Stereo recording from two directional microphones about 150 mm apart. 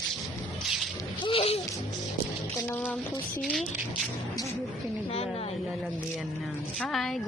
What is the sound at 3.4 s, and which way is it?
Speech, 5° left (ahead or behind).